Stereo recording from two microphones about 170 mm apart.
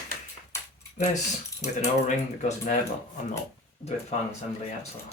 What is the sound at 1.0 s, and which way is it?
Speech, 40° left (ahead or behind).